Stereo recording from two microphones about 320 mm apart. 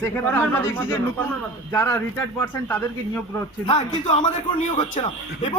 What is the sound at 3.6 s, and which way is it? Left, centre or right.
A man's voice, centre.